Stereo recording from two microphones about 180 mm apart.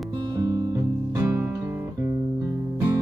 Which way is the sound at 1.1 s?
15° right (ahead or behind).